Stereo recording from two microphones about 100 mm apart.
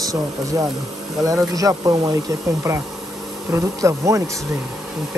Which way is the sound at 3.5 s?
30° right (ahead or behind).